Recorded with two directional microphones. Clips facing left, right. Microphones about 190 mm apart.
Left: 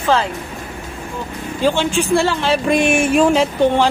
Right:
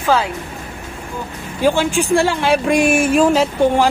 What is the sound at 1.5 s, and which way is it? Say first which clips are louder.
Speech: right 1 dB; 10° right (ahead or behind).